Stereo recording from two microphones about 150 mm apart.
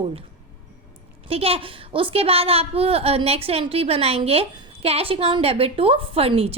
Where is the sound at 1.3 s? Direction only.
40° right (ahead or behind).